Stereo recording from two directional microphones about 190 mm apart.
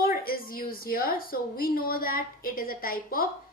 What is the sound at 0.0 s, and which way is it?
A woman's voice, 50° left (ahead or behind).